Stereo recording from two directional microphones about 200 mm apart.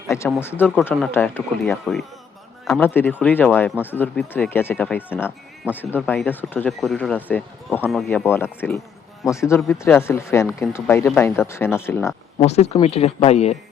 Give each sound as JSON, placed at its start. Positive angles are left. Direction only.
{"t": 0.3, "sound": "speech", "side_deg": 10}
{"t": 12.4, "sound": "speech", "side_deg": 30}